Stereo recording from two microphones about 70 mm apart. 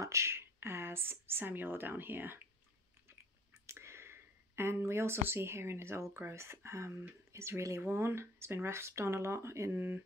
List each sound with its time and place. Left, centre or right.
0.0 s speech: right
3.6 s speech: right